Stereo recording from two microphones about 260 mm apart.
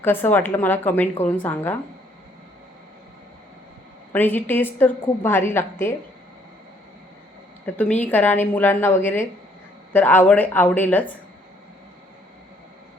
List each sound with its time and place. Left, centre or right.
0.0 s a woman's voice: centre
4.1 s a woman's voice: centre
7.6 s a woman's voice: centre